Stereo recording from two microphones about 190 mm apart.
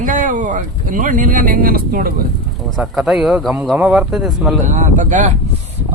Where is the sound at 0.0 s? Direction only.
45° right (ahead or behind).